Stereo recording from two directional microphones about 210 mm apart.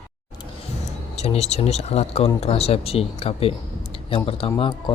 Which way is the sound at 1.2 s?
30° left (ahead or behind).